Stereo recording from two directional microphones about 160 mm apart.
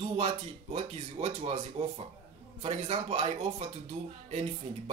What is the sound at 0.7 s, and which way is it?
Speech, 40° right (ahead or behind).